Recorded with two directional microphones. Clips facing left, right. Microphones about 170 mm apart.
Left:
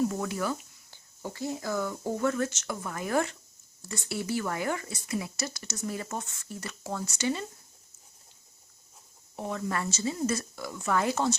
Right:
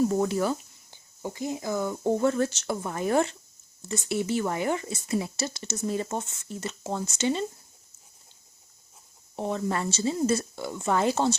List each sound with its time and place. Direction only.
0.1 s speech: 30° right (ahead or behind)
0.9 s speech: 15° right (ahead or behind)
9.3 s speech: 25° right (ahead or behind)